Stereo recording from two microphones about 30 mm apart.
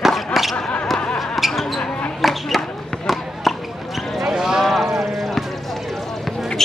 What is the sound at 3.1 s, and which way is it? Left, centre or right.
Basketball bounce, centre.